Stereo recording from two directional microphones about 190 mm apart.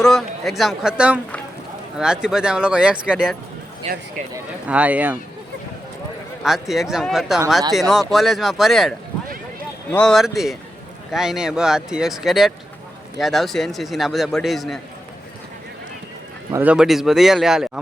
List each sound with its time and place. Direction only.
0.0 s a man's voice: centre (ahead or behind)
3.8 s speech: 30° right (ahead or behind)
4.6 s speech: 5° right (ahead or behind)
6.4 s a man's voice: centre (ahead or behind)
16.5 s a man's voice: 10° right (ahead or behind)